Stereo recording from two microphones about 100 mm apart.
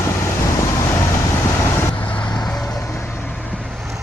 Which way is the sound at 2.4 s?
5° left (ahead or behind).